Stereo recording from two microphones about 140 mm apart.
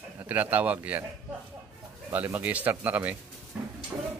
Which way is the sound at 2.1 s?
15° right (ahead or behind).